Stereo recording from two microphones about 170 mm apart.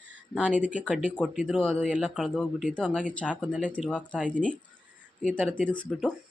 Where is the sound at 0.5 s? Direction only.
10° right (ahead or behind); by 4.5 s 5° left (ahead or behind).